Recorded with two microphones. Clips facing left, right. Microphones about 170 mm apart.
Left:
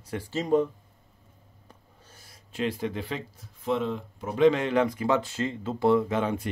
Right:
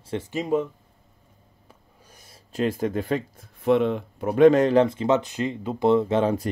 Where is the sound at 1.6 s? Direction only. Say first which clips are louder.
Right 1 dB; 15° right (ahead or behind).